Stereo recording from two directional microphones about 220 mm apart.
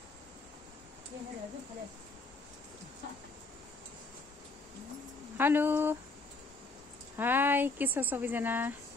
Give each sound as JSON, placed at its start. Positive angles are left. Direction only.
{"t": 5.4, "sound": "speech", "side_deg": -10}
{"t": 7.2, "sound": "speech", "side_deg": -10}